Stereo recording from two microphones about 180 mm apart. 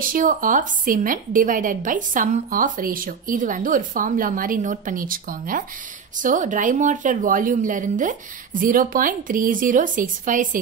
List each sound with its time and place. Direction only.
0.0 s a woman's voice: 50° right (ahead or behind)